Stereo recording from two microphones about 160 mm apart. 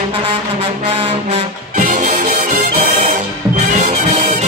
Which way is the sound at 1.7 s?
60° right (ahead or behind).